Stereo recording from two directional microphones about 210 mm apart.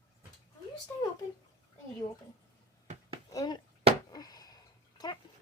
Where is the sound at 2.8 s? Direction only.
30° right (ahead or behind).